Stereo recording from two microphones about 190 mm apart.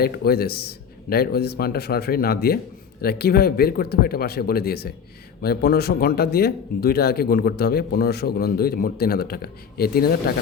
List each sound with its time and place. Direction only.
0.0 s speech: 55° left (ahead or behind)